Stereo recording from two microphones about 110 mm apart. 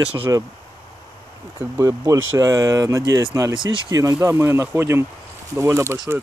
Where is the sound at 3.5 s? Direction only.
50° right (ahead or behind).